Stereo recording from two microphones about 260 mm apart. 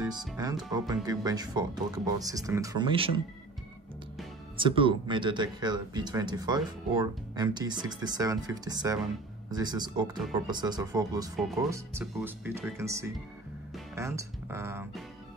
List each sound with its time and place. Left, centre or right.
0.7 s speech: centre
4.6 s speech: centre